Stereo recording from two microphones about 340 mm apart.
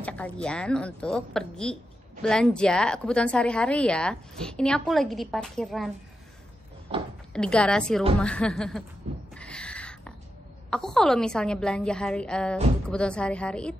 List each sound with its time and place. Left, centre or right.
0.0 s a woman's voice: centre
7.3 s a woman's voice: centre
9.3 s a sound: centre
10.7 s a woman's voice: centre